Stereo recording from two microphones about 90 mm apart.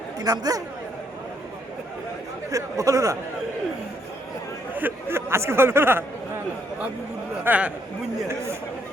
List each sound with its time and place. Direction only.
0.2 s speech: 45° right (ahead or behind)
2.5 s speech: 35° right (ahead or behind)
4.7 s speech: 20° right (ahead or behind)
7.4 s speech: 15° right (ahead or behind)